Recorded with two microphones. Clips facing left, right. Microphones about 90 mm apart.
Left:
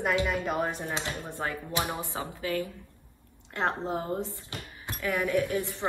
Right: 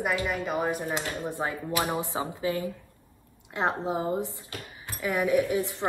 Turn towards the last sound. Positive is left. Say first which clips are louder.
# right 3 dB
turn(degrees=-15)  # may be behind; listen again after turning